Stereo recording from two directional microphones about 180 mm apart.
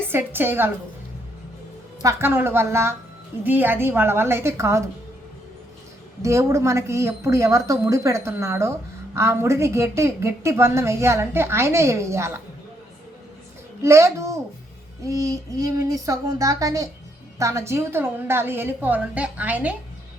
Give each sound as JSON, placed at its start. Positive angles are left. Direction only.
{"t": 0.1, "sound": "a woman's voice", "side_deg": -10}
{"t": 2.0, "sound": "a woman's voice", "side_deg": -15}
{"t": 6.2, "sound": "a woman's voice", "side_deg": -15}
{"t": 13.8, "sound": "a woman's voice", "side_deg": -15}